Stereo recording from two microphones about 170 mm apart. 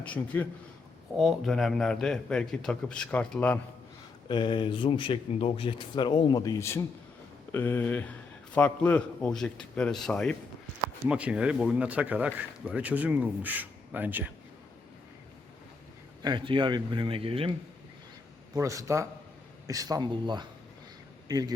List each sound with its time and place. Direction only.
0.0 s a man's voice: 10° left (ahead or behind)
4.3 s a man's voice: 30° left (ahead or behind); by 10.3 s 5° left (ahead or behind)
11.1 s speech: 5° right (ahead or behind)
16.2 s speech: 25° right (ahead or behind)
18.5 s speech: 20° right (ahead or behind)